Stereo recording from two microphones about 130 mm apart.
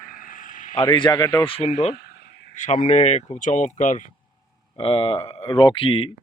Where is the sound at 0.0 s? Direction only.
90° left.